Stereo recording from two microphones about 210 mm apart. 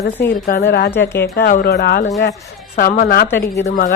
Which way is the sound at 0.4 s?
50° left (ahead or behind).